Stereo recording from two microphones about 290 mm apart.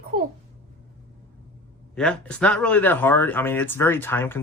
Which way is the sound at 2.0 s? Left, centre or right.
Centre.